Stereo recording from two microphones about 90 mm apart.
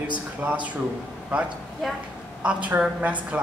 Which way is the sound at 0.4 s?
15° right (ahead or behind).